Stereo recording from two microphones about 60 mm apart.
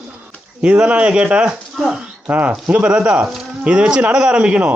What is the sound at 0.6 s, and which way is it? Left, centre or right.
Speech, centre.